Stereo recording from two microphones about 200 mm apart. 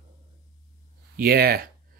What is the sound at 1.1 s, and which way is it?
Speech, 50° right (ahead or behind).